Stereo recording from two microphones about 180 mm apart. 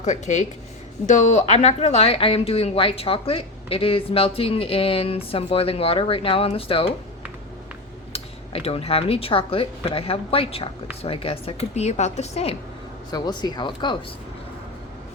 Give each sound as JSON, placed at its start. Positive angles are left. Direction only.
{"t": 0.0, "sound": "a woman's voice", "side_deg": 40}
{"t": 8.1, "sound": "a woman's voice", "side_deg": 35}
{"t": 13.1, "sound": "speech", "side_deg": 25}